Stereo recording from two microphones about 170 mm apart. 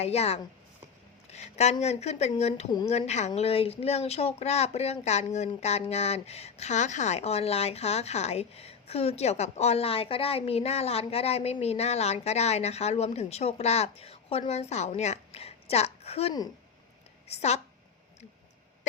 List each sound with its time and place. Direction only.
0.0 s a woman's voice: 40° left (ahead or behind)